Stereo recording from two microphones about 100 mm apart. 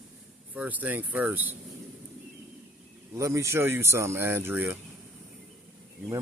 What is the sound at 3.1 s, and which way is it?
Speech, 30° right (ahead or behind).